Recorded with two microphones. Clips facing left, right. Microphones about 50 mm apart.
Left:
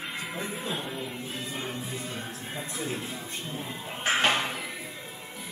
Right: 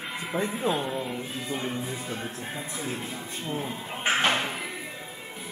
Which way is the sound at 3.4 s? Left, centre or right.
Right.